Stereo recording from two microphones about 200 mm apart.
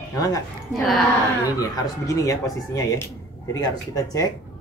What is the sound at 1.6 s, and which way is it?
Speech, 15° left (ahead or behind).